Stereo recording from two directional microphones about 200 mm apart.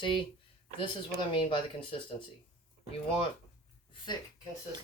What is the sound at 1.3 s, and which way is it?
Speech, 25° left (ahead or behind).